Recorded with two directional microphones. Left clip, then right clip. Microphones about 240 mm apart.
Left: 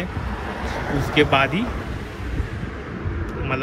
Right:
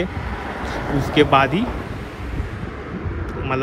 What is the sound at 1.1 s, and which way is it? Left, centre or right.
Speech, centre.